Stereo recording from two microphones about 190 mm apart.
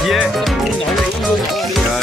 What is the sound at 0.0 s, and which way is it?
Music, centre (ahead or behind).